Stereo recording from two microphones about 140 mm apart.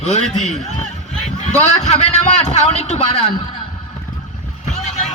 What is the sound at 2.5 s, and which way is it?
Speech, 55° left (ahead or behind).